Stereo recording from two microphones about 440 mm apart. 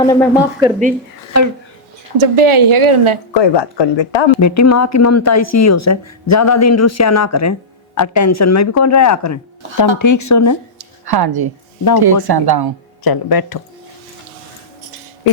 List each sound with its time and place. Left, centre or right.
0.0 s a woman's voice: centre
0.6 s speech: centre
2.1 s a woman's voice: right
3.3 s speech: left
4.4 s speech: left
10.8 s a sound: right
11.9 s speech: right
13.1 s speech: left